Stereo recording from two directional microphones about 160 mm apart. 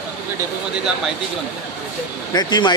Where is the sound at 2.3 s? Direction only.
25° left (ahead or behind).